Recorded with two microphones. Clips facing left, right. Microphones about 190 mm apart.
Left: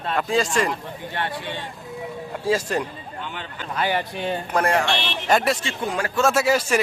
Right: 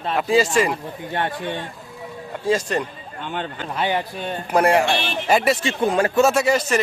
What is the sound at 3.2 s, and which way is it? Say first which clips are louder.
Speech: right 6 dB; 50° right (ahead or behind).